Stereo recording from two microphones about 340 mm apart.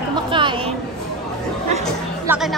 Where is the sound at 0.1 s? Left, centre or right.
Centre.